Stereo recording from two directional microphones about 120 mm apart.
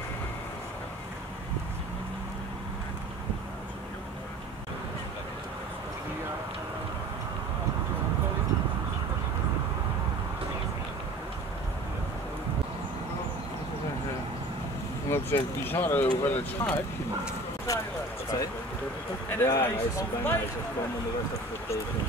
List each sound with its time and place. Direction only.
15.0 s speech: 20° left (ahead or behind)
17.7 s speech: 30° left (ahead or behind)
19.2 s speech: 20° left (ahead or behind)